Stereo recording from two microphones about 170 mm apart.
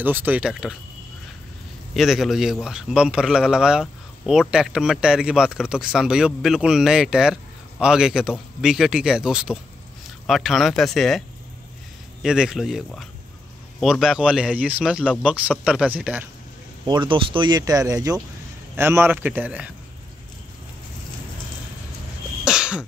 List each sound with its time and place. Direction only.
0.0 s a man's voice: 10° right (ahead or behind)
2.0 s a man's voice: centre (ahead or behind)
16.8 s a man's voice: 25° right (ahead or behind); by 19.7 s 10° right (ahead or behind)
22.4 s cough: 5° right (ahead or behind)